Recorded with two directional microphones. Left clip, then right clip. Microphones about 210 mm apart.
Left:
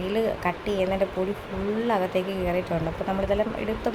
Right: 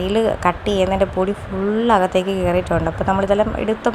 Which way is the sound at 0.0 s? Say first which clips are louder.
Right 8 dB; 20° right (ahead or behind).